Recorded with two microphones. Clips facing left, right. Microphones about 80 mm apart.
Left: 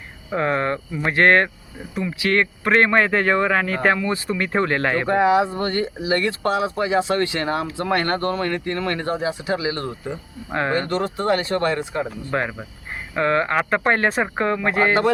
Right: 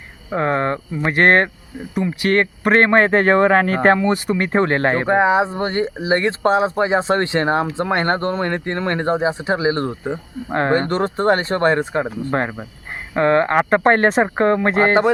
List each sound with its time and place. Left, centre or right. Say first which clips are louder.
0.3 s speech: right 2 dB; right
14.1 s speech: right 6 dB; right
14.3 s speech: right 4 dB; right